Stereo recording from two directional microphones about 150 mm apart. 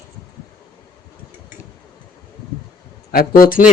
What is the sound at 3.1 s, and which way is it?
Speech, 75° left (ahead or behind).